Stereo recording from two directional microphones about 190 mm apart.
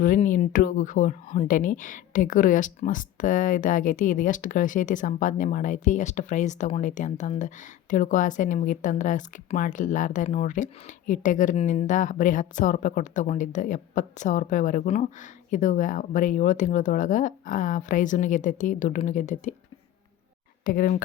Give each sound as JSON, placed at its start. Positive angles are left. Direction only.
{"t": 0.0, "sound": "speech", "side_deg": 45}
{"t": 20.7, "sound": "speech", "side_deg": 50}